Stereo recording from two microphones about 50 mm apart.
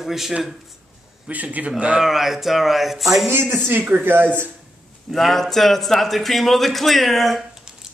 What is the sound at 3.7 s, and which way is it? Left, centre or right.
Speech, right.